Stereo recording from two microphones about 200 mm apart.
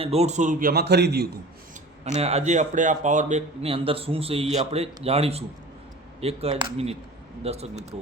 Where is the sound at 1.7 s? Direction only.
35° right (ahead or behind).